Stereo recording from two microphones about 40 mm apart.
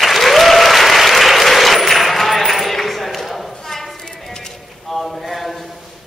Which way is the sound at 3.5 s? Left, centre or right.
Centre.